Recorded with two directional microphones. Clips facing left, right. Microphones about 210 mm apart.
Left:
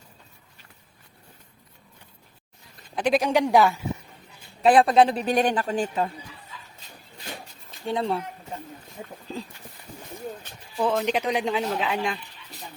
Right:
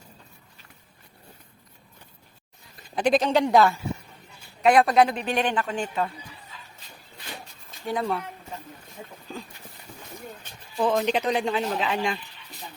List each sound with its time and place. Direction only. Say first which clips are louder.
2.9 s speech: right 1 dB; 5° left (ahead or behind)
4.6 s a woman's voice: left 1 dB; 30° left (ahead or behind)
7.9 s speech: left 1 dB; 30° left (ahead or behind)
10.8 s speech: right 1 dB; centre (ahead or behind)